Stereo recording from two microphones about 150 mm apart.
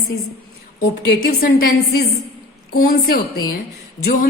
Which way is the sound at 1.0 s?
80° left.